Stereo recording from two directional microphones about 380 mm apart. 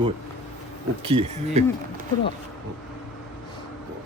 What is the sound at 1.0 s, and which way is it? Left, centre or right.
Speech, centre.